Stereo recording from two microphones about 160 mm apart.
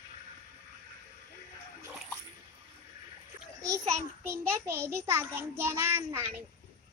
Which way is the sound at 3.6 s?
20° right (ahead or behind).